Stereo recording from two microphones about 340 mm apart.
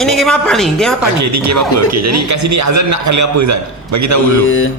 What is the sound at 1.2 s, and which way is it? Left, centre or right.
A man's voice, right.